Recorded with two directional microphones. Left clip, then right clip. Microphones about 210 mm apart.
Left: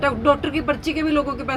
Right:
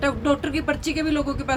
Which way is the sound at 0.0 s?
25° right (ahead or behind).